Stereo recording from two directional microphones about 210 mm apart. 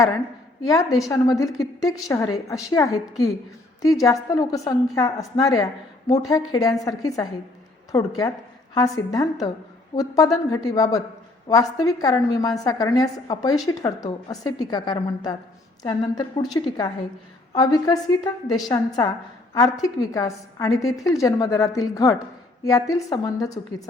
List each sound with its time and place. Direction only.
0.6 s a woman's voice: 15° left (ahead or behind)